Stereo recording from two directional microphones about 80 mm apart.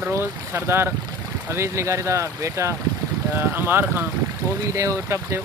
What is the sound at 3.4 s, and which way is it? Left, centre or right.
Speech, right.